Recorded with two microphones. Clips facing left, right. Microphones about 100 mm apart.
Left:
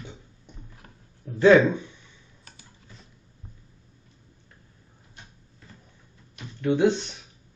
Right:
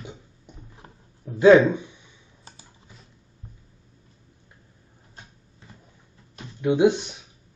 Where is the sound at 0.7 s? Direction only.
20° right (ahead or behind).